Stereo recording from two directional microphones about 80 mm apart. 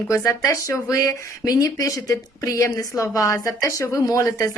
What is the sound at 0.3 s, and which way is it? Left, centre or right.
Speech, left.